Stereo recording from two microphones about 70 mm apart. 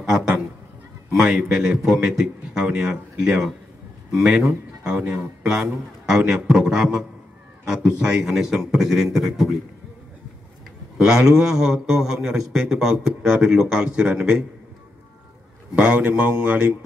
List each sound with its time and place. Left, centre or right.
0.0 s a man's voice: centre
11.0 s a man's voice: centre
15.7 s a man's voice: centre